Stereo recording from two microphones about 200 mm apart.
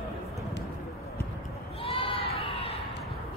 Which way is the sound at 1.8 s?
25° left (ahead or behind).